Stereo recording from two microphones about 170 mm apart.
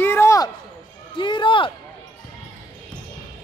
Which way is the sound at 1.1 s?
30° left (ahead or behind).